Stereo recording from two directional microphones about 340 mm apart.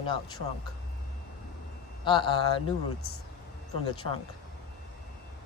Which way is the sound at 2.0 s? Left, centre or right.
Centre.